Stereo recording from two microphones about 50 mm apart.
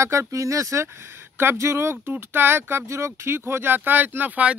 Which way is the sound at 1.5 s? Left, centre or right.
Right.